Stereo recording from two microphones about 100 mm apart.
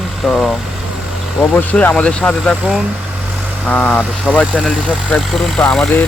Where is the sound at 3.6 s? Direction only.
10° left (ahead or behind).